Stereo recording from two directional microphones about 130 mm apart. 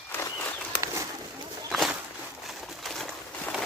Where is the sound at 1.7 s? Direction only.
Centre (ahead or behind).